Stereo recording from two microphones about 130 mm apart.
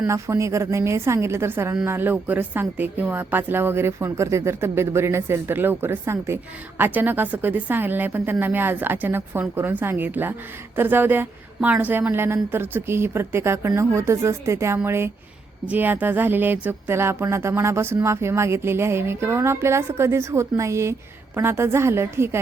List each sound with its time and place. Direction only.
0.1 s a woman's voice: 20° right (ahead or behind)